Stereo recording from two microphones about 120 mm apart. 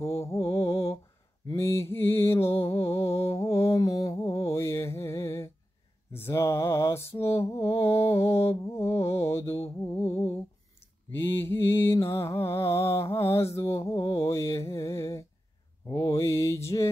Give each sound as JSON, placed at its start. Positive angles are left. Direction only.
{"t": 0.0, "sound": "mantra", "side_deg": 25}
{"t": 12.1, "sound": "music", "side_deg": 20}
{"t": 13.3, "sound": "mantra", "side_deg": 25}